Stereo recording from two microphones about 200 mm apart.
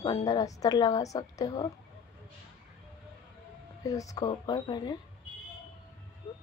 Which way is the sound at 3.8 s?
15° left (ahead or behind).